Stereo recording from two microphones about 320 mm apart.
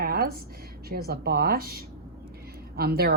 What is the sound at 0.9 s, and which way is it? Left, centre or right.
A woman's voice, right.